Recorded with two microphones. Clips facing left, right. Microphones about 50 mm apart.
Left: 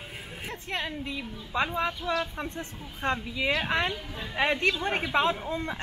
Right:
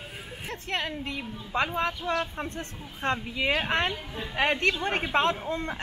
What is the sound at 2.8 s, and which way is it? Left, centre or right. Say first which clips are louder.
A woman's voice: even; centre.